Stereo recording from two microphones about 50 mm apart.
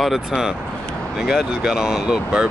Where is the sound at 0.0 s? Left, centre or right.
Centre.